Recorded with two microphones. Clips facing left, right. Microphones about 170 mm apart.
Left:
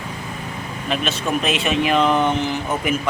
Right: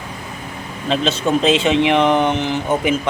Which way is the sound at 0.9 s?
25° right (ahead or behind).